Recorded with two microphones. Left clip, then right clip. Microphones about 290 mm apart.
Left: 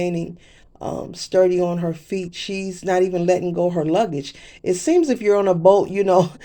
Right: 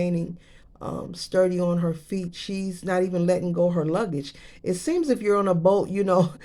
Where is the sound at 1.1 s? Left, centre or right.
Centre.